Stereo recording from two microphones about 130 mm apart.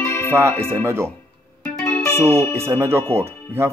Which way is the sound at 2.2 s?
20° right (ahead or behind).